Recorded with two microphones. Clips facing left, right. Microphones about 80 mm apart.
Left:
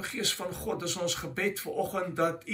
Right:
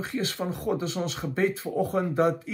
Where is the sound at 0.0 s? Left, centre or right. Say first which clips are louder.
Right 5 dB; right.